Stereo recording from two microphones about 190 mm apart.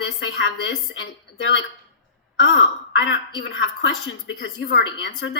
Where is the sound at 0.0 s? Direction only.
75° left (ahead or behind).